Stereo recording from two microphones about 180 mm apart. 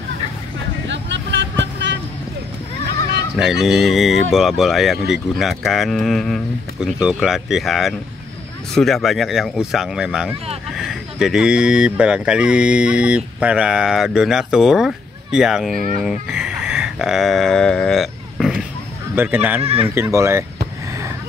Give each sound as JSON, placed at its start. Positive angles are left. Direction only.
{"t": 0.8, "sound": "vehicle", "side_deg": -85}
{"t": 3.3, "sound": "speech", "side_deg": 0}
{"t": 16.0, "sound": "a sound", "side_deg": -5}
{"t": 19.1, "sound": "speech", "side_deg": -10}
{"t": 19.6, "sound": "speech", "side_deg": -35}
{"t": 19.9, "sound": "speech", "side_deg": -15}